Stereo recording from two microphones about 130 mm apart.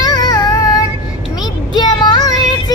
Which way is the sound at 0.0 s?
30° left (ahead or behind).